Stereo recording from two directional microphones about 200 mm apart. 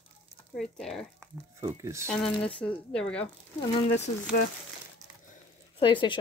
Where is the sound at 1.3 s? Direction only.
15° right (ahead or behind).